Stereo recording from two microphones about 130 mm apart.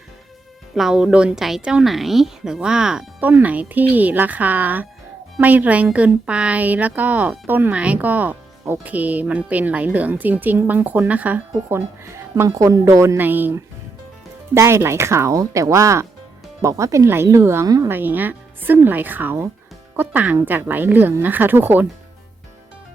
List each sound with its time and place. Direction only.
0.8 s speech: 5° right (ahead or behind)
14.5 s speech: 20° right (ahead or behind)